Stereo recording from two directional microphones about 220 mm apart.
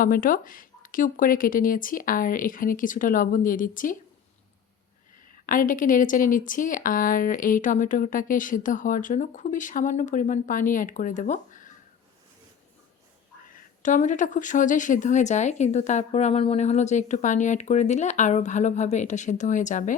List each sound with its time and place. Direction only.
0.0 s speech: 40° left (ahead or behind)
5.5 s speech: 35° left (ahead or behind)
13.5 s speech: 35° left (ahead or behind)